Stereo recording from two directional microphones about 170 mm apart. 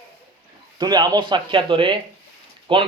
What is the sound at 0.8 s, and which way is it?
Speech, 25° right (ahead or behind).